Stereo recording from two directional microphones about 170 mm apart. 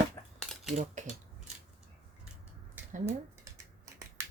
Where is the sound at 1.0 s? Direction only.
45° right (ahead or behind).